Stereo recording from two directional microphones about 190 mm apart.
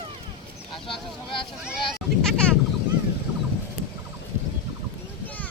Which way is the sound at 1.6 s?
Centre (ahead or behind).